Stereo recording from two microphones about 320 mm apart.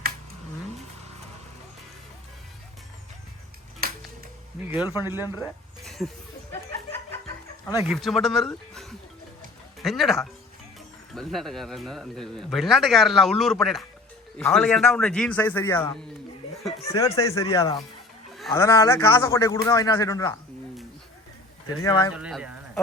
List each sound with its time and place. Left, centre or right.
3.8 s music: right
4.7 s a man's voice: centre
5.2 s a man's voice: centre
5.8 s a sound: centre
6.5 s chuckle: centre
7.9 s a man's voice: centre
22.1 s speech: centre